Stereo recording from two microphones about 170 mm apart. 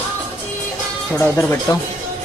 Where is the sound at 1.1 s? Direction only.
15° left (ahead or behind).